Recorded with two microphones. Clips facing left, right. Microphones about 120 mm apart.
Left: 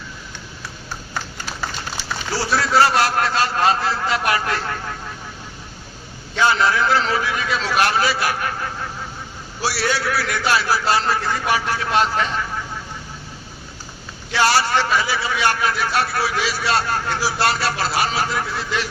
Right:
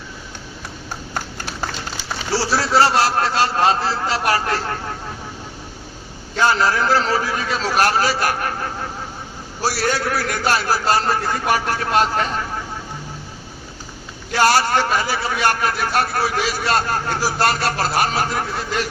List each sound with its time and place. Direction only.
2.3 s a man's voice: 30° right (ahead or behind)
6.3 s a man's voice: 40° right (ahead or behind)
9.6 s a man's voice: 45° right (ahead or behind)
14.3 s a man's voice: 45° right (ahead or behind)